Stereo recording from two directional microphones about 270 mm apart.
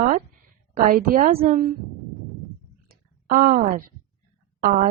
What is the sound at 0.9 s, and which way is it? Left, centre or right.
Speech, right.